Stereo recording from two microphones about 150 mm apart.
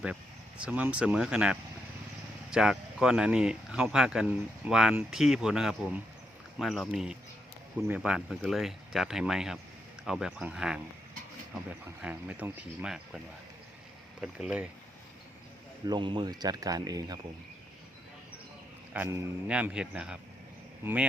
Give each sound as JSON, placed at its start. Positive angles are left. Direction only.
{"t": 0.0, "sound": "speech", "side_deg": -10}
{"t": 14.2, "sound": "speech", "side_deg": -5}
{"t": 15.9, "sound": "speech", "side_deg": -30}
{"t": 18.9, "sound": "speech", "side_deg": -15}